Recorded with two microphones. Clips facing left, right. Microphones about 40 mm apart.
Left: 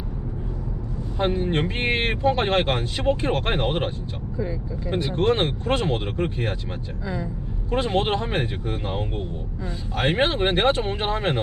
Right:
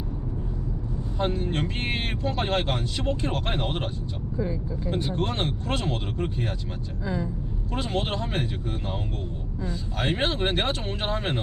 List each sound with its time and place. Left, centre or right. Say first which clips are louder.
1.2 s speech: left 4 dB; left
5.1 s speech: left 7 dB; left
7.7 s speech: left 6 dB; left
10.2 s speech: left 5 dB; centre